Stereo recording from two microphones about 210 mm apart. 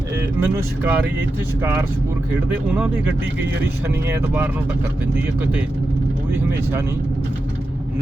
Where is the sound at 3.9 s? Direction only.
10° right (ahead or behind).